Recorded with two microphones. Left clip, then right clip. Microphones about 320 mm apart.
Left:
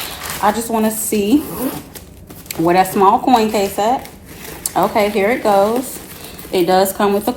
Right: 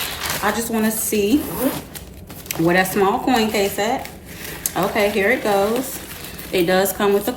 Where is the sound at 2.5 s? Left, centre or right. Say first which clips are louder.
Left 4 dB; centre.